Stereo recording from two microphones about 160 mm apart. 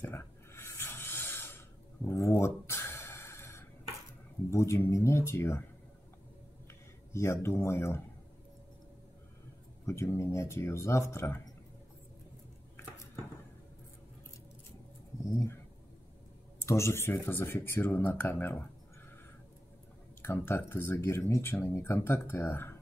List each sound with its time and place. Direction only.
0.0 s a sound: 15° left (ahead or behind)
4.5 s speech: 15° left (ahead or behind)
7.1 s speech: 15° left (ahead or behind)
9.8 s speech: 15° left (ahead or behind)
15.2 s speech: 15° left (ahead or behind)
16.6 s speech: 15° left (ahead or behind)
20.2 s speech: 15° left (ahead or behind)